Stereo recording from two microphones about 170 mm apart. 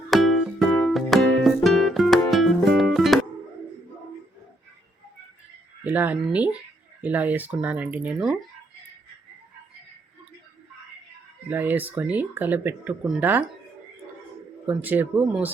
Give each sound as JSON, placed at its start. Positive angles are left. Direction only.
{"t": 0.1, "sound": "music", "side_deg": 0}
{"t": 5.8, "sound": "speech", "side_deg": -10}
{"t": 11.4, "sound": "speech", "side_deg": -10}
{"t": 14.7, "sound": "speech", "side_deg": -10}